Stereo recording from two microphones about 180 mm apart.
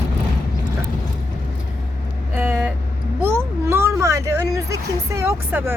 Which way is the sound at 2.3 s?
10° right (ahead or behind).